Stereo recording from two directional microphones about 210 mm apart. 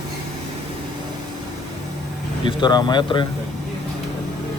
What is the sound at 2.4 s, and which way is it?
Speech, 20° left (ahead or behind).